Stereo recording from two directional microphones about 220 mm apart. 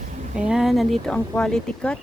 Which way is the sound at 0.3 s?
5° right (ahead or behind).